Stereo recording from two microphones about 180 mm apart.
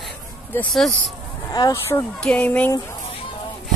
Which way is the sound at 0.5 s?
Centre (ahead or behind).